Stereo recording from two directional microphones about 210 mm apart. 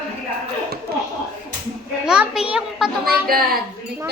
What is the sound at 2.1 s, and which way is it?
A child's voice, 5° right (ahead or behind).